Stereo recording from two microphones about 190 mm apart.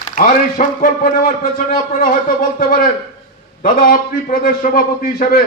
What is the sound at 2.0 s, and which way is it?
A man's voice, 45° left (ahead or behind).